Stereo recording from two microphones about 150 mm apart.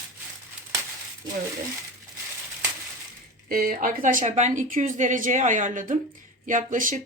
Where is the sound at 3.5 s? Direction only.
70° right (ahead or behind).